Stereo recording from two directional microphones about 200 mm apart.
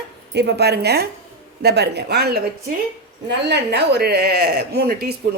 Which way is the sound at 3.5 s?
55° right (ahead or behind).